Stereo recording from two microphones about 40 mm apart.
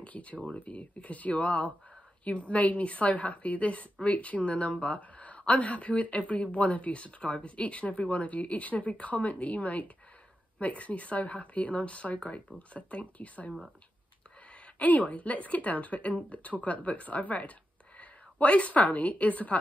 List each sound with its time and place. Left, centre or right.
0.0 s a woman's voice: left
14.5 s a woman's voice: left